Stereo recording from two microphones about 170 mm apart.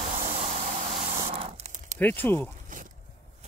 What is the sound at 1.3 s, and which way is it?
Tearing, 35° right (ahead or behind).